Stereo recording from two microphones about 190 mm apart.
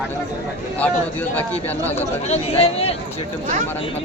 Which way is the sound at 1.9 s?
35° left (ahead or behind).